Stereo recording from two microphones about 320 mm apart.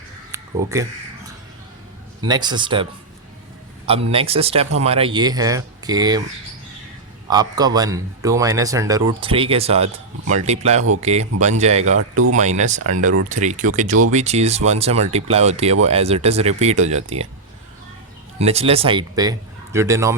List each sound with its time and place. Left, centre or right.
0.3 s a sound: centre
2.2 s a man's voice: centre
3.8 s a man's voice: centre
7.3 s a man's voice: centre
11.9 s speech: right
12.3 s speech: right
18.3 s a man's voice: centre